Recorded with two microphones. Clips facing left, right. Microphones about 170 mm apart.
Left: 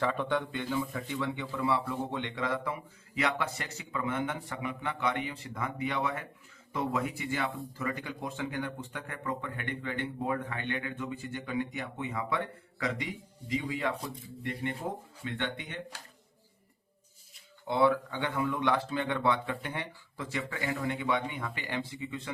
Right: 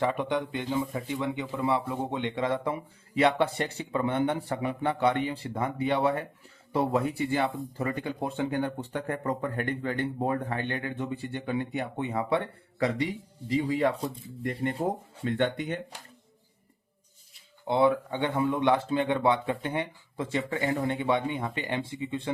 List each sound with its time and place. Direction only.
0.0 s speech: 15° right (ahead or behind); by 15.8 s 40° right (ahead or behind)
17.7 s speech: 25° right (ahead or behind)